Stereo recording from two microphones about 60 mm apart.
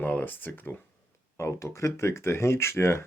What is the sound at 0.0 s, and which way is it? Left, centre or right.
Speech, left.